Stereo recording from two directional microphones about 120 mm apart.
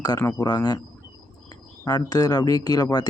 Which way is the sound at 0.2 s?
30° left (ahead or behind).